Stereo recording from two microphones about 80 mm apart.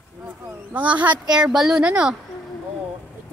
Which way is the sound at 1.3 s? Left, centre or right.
Centre.